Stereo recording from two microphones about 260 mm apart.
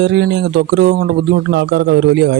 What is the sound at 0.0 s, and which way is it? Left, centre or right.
A man's voice, right.